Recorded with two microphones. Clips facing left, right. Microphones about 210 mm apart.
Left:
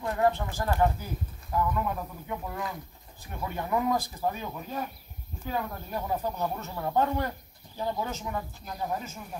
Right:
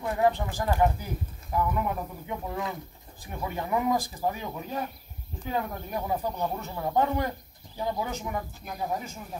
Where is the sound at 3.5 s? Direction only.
15° right (ahead or behind).